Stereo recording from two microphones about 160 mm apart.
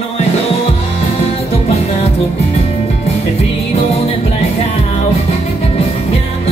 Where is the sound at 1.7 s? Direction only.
40° left (ahead or behind).